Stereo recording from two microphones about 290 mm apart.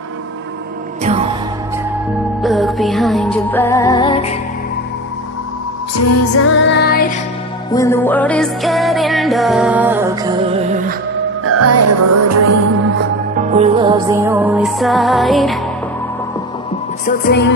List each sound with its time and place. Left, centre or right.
2.4 s music: centre
5.9 s music: left
7.7 s music: centre
11.4 s music: right
13.4 s music: right; by 15.6 s centre
17.0 s music: left